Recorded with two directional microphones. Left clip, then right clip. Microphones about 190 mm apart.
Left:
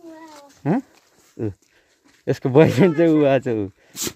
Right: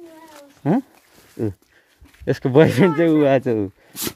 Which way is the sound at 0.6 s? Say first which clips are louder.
Right 2 dB; 5° left (ahead or behind).